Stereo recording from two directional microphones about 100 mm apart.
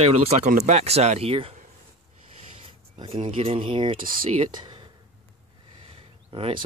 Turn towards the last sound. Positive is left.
turn(degrees=-70)  # may be behind; listen again after turning